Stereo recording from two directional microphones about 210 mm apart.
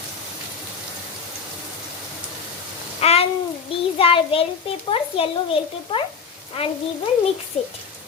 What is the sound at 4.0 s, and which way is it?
A child's voice, 25° left (ahead or behind).